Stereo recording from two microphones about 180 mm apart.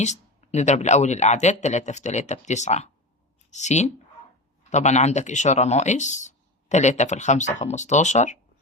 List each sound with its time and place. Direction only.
0.0 s speech: 40° left (ahead or behind)